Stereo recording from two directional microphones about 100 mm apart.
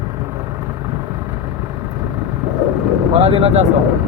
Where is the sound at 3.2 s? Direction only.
80° right.